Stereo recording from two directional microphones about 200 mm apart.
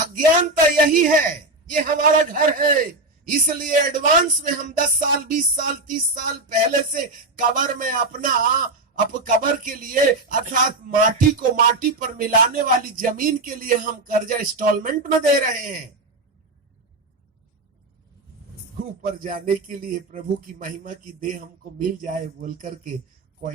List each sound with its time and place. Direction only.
0.4 s speech: 45° right (ahead or behind)
18.8 s speech: 45° right (ahead or behind)